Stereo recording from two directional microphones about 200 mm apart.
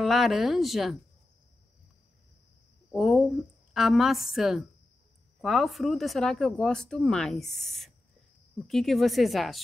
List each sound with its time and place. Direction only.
0.0 s speech: centre (ahead or behind)
2.9 s speech: centre (ahead or behind)